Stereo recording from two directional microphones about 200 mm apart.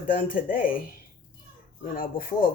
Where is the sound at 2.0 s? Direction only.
45° left (ahead or behind).